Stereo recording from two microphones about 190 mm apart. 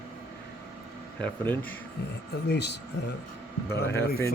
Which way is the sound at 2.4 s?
60° left (ahead or behind).